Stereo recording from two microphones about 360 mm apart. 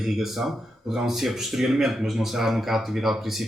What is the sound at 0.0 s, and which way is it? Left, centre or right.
Speech, centre.